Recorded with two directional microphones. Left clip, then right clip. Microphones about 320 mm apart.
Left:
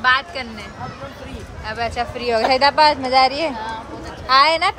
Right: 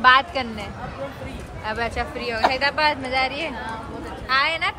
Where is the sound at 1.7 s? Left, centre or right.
Centre.